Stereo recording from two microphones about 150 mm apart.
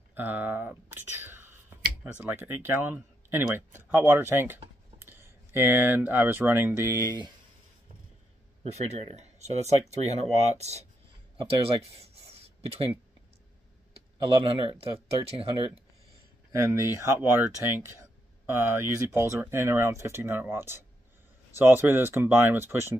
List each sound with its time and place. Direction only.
0.1 s whispering: 15° right (ahead or behind)
2.2 s speech: 15° right (ahead or behind)
8.7 s speech: 45° right (ahead or behind)
14.2 s speech: 35° right (ahead or behind)
16.5 s speech: 20° right (ahead or behind)